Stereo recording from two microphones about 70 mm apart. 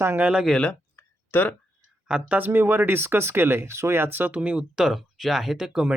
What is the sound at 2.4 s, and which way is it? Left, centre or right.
Speech, right.